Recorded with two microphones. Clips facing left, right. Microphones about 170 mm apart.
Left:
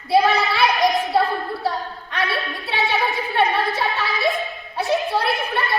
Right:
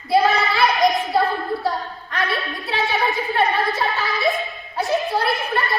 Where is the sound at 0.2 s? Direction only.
Centre (ahead or behind).